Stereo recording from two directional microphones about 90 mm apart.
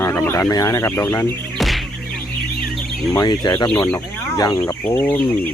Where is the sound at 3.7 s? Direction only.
20° left (ahead or behind).